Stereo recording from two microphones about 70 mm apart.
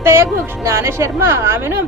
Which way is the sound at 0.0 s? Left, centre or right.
Right.